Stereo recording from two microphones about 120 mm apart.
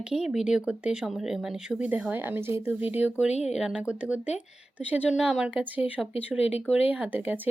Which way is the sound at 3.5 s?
5° right (ahead or behind).